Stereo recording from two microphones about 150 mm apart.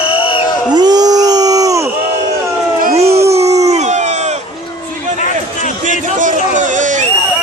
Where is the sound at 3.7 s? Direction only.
50° right (ahead or behind).